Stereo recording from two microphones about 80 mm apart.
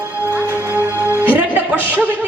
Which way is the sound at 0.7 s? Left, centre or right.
Right.